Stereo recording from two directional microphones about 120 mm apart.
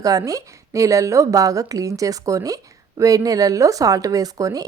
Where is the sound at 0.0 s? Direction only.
30° right (ahead or behind).